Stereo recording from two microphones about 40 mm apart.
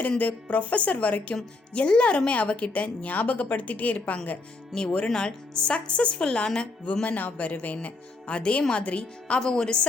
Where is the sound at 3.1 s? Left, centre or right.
Left.